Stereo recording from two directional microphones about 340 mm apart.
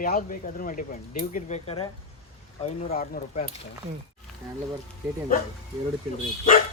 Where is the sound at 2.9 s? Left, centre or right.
Left.